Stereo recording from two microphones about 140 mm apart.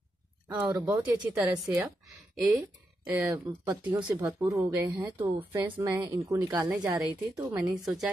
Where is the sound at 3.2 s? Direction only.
15° right (ahead or behind).